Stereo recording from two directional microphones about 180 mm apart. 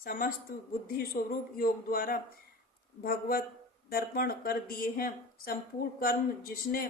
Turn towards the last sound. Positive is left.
turn(degrees=55)  # may be behind; listen again after turning